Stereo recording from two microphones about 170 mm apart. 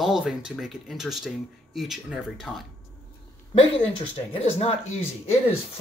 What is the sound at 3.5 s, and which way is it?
Speech, 35° left (ahead or behind).